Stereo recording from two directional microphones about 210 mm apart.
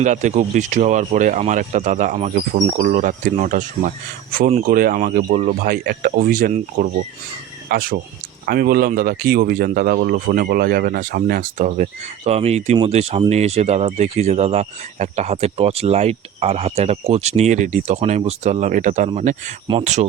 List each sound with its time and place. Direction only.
0.0 s speech: 35° right (ahead or behind)